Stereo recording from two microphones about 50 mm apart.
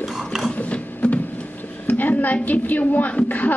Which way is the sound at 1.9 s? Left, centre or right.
Left.